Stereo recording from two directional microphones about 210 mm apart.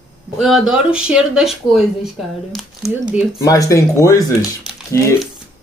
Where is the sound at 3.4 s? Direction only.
15° left (ahead or behind).